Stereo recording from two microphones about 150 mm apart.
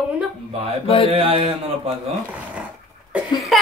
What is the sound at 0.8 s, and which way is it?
Speech, 40° left (ahead or behind).